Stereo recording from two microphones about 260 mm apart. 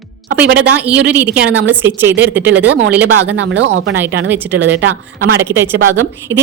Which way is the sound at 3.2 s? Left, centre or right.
Right.